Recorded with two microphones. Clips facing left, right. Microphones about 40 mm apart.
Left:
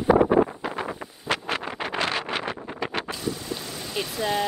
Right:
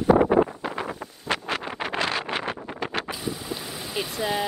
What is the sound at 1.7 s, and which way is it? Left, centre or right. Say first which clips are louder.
Vehicle: right 1 dB; right.